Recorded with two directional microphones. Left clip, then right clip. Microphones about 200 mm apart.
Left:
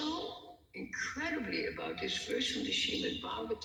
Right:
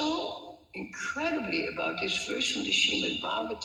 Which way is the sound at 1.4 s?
35° right (ahead or behind).